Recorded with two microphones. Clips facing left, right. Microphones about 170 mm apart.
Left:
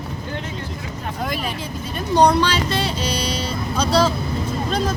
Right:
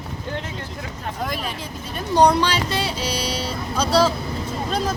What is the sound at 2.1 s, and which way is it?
Speech, 10° right (ahead or behind).